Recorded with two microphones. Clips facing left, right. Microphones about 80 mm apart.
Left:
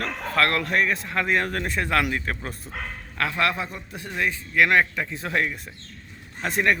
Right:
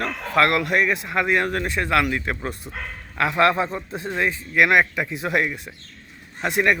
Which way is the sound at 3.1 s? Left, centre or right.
Right.